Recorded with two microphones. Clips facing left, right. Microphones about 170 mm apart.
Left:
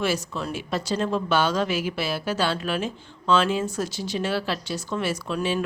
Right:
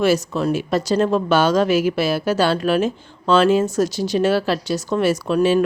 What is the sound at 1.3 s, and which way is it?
Speech, 40° right (ahead or behind).